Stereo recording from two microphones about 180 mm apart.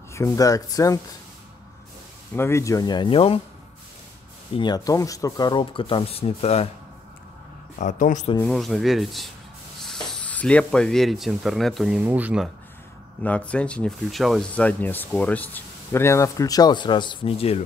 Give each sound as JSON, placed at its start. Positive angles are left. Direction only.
{"t": 0.1, "sound": "speech", "side_deg": 20}
{"t": 2.3, "sound": "speech", "side_deg": 15}
{"t": 4.6, "sound": "speech", "side_deg": 25}
{"t": 7.8, "sound": "speech", "side_deg": 45}
{"t": 8.4, "sound": "speech", "side_deg": 5}
{"t": 13.2, "sound": "speech", "side_deg": 5}